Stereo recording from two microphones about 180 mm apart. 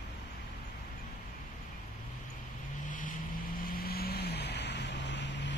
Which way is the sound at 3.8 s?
60° left (ahead or behind).